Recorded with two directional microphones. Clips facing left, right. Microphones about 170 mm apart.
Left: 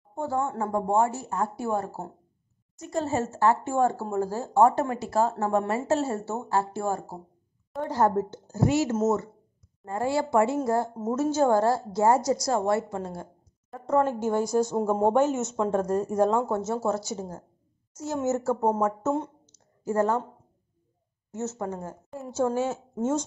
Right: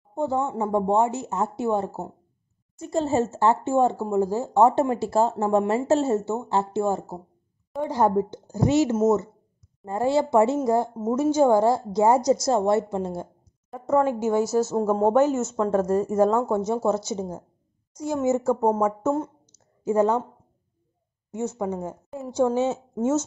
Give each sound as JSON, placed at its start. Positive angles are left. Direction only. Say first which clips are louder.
{"t": 0.1, "sound": "a woman's voice", "louder": "right 3 dB", "side_deg": -20}
{"t": 13.9, "sound": "a woman's voice", "louder": "right 3 dB", "side_deg": -10}
{"t": 18.9, "sound": "speech", "louder": "right 3 dB", "side_deg": -5}
{"t": 19.8, "sound": "speech", "louder": "right 4 dB", "side_deg": -15}
{"t": 21.3, "sound": "a woman's voice", "louder": "right 4 dB", "side_deg": -15}